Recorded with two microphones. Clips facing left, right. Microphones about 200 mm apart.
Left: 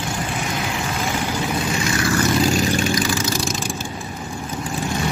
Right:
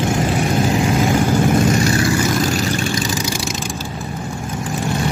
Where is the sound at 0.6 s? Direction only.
35° right (ahead or behind).